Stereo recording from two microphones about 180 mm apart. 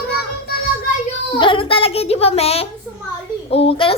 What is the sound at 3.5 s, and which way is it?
Speech, 30° left (ahead or behind).